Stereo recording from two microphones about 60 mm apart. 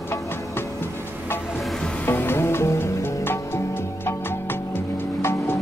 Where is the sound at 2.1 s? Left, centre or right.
Left.